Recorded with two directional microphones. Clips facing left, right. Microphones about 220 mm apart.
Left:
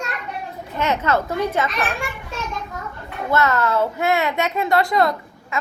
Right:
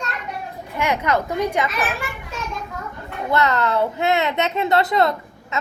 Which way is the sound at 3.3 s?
20° right (ahead or behind).